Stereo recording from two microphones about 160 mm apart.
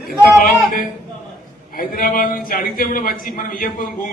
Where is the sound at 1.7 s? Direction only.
60° left (ahead or behind).